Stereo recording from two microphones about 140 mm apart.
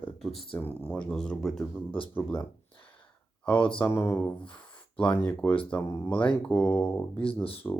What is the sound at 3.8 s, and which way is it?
Speech, 20° left (ahead or behind).